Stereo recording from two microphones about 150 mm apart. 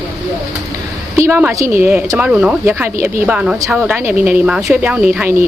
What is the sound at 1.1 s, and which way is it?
Speech, 15° right (ahead or behind).